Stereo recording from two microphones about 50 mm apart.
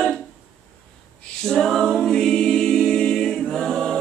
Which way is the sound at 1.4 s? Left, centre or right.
Centre.